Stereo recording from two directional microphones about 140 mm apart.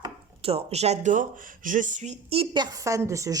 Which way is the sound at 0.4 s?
50° right (ahead or behind).